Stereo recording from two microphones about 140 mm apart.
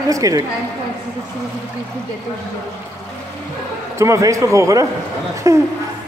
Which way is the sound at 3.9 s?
20° right (ahead or behind).